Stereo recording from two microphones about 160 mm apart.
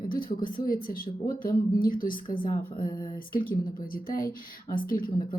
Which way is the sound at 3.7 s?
60° left (ahead or behind).